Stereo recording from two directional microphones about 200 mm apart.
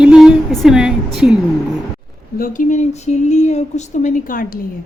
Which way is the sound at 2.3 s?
45° left (ahead or behind).